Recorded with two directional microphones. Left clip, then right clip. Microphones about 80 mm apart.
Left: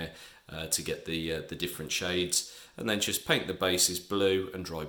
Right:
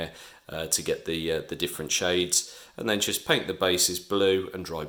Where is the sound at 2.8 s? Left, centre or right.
Centre.